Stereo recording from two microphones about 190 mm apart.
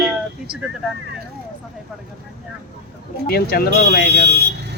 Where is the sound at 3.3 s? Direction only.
55° left (ahead or behind).